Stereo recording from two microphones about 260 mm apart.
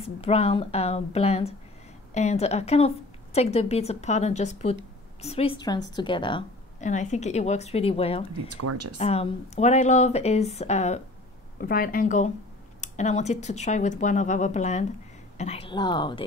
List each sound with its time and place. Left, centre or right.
0.0 s a woman's voice: left
8.3 s speech: right
8.9 s a woman's voice: left